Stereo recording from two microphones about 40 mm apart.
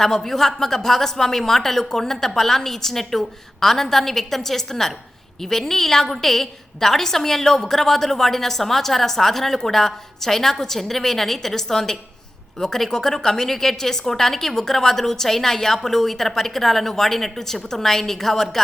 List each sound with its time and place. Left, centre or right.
0.0 s a woman's voice: centre